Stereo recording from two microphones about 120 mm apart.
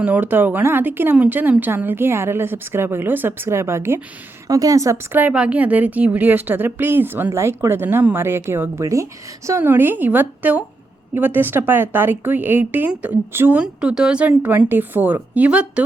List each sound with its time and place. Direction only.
0.0 s speech: 15° right (ahead or behind)
5.2 s speech: 10° right (ahead or behind)